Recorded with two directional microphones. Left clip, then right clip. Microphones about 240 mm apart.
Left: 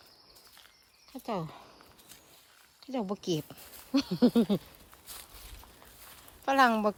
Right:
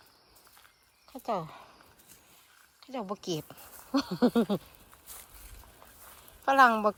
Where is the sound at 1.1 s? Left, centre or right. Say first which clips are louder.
Right 3 dB; centre.